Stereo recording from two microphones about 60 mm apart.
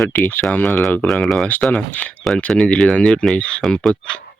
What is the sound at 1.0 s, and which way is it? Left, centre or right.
Speech, centre.